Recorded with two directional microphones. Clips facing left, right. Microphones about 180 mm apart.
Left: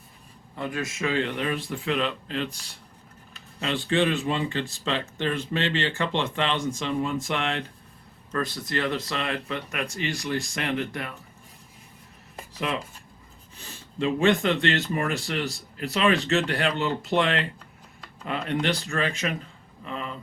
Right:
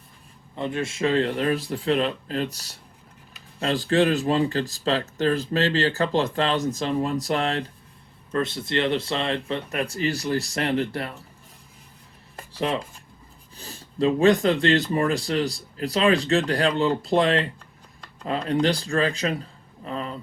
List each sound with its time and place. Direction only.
0.5 s speech: 25° right (ahead or behind)
8.3 s speech: 25° right (ahead or behind)
12.5 s speech: 35° right (ahead or behind)